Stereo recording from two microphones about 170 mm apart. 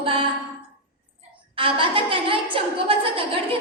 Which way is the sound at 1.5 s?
30° right (ahead or behind).